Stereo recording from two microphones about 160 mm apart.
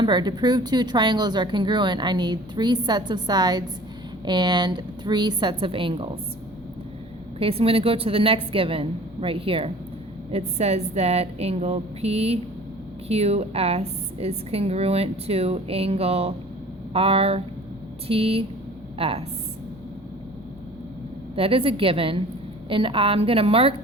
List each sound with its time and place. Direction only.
0.0 s speech: 30° right (ahead or behind)
7.3 s a woman's voice: 35° right (ahead or behind)
21.3 s a woman's voice: 35° right (ahead or behind)